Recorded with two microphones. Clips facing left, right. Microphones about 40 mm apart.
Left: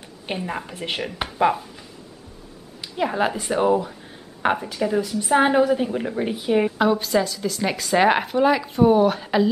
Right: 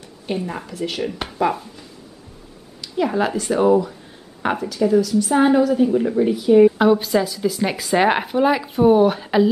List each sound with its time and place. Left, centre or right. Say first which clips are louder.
0.4 s speech: right 1 dB; centre
0.7 s a woman's voice: right 3 dB; left
1.0 s a woman's voice: left 1 dB; centre
5.9 s speech: right 7 dB; centre
6.1 s a woman's voice: right 7 dB; left
6.8 s speech: right 3 dB; centre